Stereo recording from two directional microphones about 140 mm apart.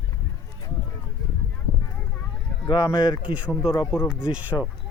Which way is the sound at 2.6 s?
25° left (ahead or behind).